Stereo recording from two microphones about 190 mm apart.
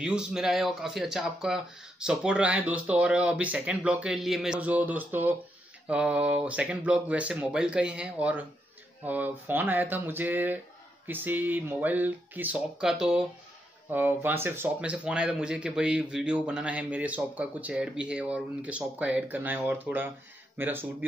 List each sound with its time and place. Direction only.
0.0 s speech: 5° right (ahead or behind)